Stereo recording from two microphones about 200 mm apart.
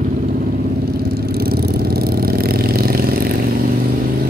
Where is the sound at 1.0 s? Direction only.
50° right (ahead or behind).